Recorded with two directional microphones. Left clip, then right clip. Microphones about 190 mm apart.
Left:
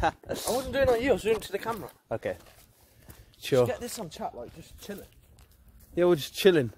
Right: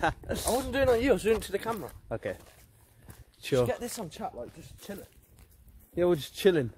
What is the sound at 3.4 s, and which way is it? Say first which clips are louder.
Speech: left 3 dB; 30° left (ahead or behind).